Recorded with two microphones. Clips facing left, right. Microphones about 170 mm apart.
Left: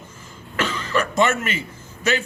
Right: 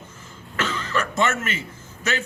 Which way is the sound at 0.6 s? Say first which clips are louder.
Left 3 dB; 15° left (ahead or behind).